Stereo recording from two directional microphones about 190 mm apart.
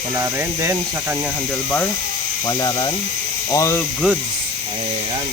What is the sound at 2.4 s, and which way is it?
Speech, 20° left (ahead or behind).